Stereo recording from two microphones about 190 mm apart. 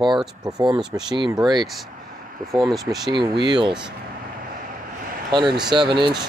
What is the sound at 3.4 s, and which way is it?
Speech, 25° right (ahead or behind).